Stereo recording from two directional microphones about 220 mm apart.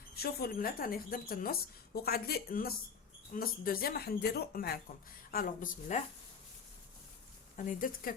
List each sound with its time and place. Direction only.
0.2 s speech: 45° left (ahead or behind)
7.5 s speech: 40° left (ahead or behind)